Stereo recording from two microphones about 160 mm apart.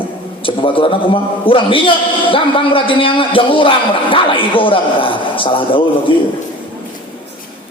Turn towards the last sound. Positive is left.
turn(degrees=35)  # may be behind; listen again after turning